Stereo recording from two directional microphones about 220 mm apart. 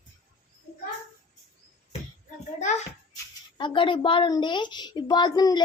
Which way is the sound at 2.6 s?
35° left (ahead or behind).